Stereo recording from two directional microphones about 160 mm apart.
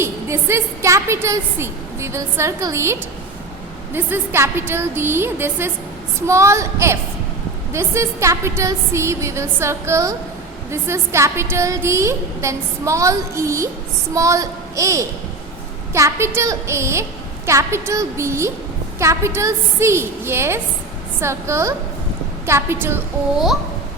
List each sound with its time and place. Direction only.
0.0 s a woman's voice: 15° right (ahead or behind)